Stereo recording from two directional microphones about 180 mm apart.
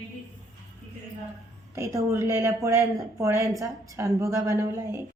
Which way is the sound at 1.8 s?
15° right (ahead or behind).